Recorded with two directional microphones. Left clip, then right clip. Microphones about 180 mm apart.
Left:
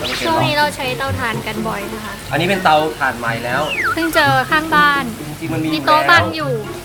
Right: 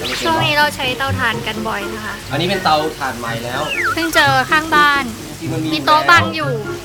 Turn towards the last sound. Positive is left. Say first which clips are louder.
# right 1 dB
turn(degrees=0)  # may be behind; listen again after turning